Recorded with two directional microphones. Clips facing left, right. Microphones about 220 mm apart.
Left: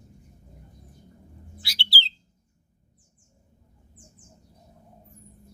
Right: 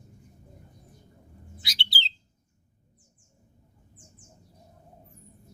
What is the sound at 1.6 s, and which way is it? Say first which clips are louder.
Bird: left 2 dB; 20° right (ahead or behind).